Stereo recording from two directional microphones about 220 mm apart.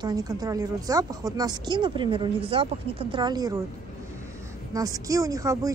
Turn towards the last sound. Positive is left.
turn(degrees=-15)  # may be behind; listen again after turning